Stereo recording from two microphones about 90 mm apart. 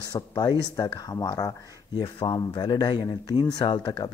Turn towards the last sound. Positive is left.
turn(degrees=50)  # may be behind; listen again after turning